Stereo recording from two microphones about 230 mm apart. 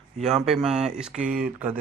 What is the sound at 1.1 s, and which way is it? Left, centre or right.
Speech, right.